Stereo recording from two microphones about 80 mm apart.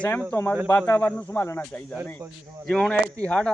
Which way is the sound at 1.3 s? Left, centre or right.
Left.